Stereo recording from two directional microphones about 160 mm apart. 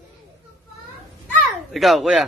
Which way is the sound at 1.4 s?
Centre (ahead or behind).